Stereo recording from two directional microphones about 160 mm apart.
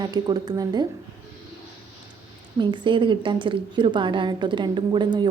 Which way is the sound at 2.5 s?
30° right (ahead or behind).